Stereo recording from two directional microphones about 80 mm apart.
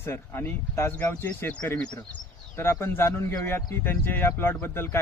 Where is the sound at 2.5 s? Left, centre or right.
Left.